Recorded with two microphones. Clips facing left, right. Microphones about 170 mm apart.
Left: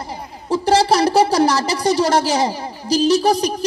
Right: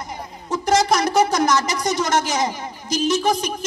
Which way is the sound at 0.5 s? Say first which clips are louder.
Left 3 dB; 30° left (ahead or behind).